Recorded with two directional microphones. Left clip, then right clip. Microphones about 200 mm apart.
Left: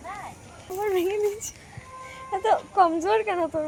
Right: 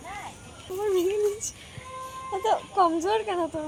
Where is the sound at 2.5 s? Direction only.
5° left (ahead or behind).